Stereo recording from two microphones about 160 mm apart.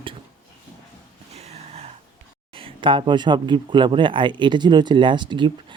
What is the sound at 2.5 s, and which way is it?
Speech, 35° right (ahead or behind).